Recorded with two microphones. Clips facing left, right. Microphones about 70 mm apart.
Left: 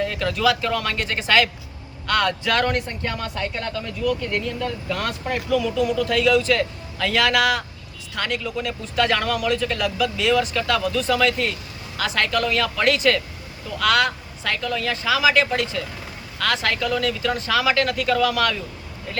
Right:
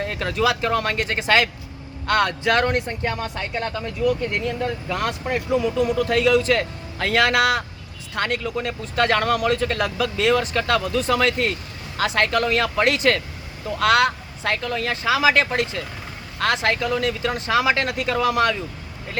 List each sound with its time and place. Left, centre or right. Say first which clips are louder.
0.0 s speech: left 1 dB; right